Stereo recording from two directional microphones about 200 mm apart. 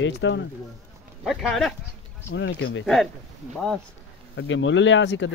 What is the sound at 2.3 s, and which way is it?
Speech, 65° left (ahead or behind).